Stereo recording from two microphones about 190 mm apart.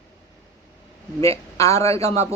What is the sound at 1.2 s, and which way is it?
Speech, 15° left (ahead or behind).